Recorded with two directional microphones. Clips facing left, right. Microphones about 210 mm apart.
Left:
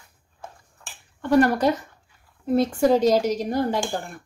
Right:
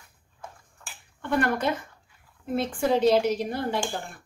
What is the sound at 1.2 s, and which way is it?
A woman's voice, 40° left (ahead or behind).